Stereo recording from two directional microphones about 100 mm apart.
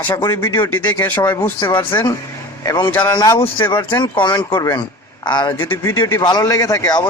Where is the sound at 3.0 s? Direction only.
45° left (ahead or behind).